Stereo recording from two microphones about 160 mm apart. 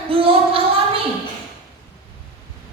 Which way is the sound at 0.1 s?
35° right (ahead or behind).